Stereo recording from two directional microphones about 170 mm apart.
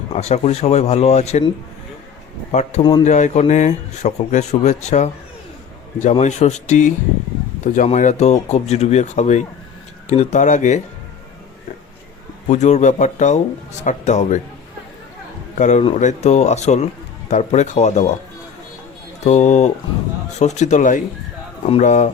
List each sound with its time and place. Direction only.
0.1 s a man's voice: 40° left (ahead or behind)
2.5 s a man's voice: 40° left (ahead or behind)
12.5 s speech: 45° left (ahead or behind)
15.5 s a man's voice: 45° left (ahead or behind)
19.2 s speech: 40° left (ahead or behind)